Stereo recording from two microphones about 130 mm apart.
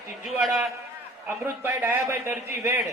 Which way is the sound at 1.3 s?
15° right (ahead or behind).